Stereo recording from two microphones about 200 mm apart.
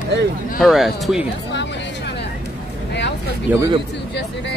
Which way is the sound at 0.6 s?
Centre (ahead or behind).